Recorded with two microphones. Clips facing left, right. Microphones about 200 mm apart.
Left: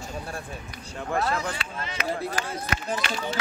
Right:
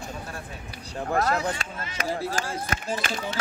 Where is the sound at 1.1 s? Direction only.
40° right (ahead or behind).